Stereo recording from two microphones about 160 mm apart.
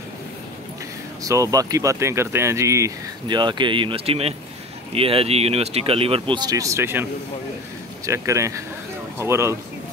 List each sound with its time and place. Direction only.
1.2 s speech: 20° right (ahead or behind)
8.1 s speech: 20° right (ahead or behind)